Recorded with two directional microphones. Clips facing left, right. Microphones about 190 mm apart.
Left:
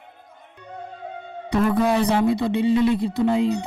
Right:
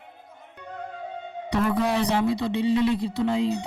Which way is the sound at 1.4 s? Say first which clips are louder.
Left 4 dB; 50° left (ahead or behind).